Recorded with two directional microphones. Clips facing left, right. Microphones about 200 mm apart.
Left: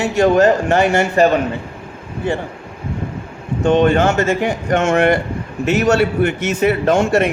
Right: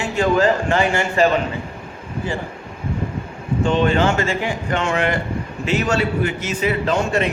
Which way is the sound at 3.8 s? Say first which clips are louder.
Left 4 dB; 45° left (ahead or behind).